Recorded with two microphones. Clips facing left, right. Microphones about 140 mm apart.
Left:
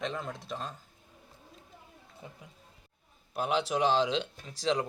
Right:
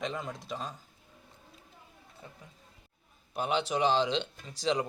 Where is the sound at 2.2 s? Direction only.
15° left (ahead or behind).